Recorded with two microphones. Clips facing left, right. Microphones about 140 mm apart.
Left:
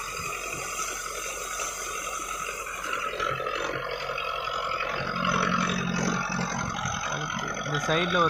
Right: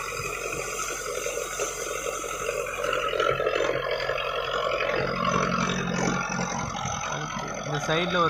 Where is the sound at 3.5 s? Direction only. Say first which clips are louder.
Right 6 dB; 70° right (ahead or behind).